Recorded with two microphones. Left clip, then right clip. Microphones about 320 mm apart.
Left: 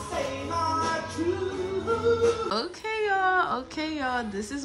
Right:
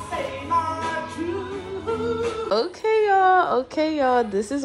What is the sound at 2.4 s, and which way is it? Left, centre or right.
A woman's voice, centre.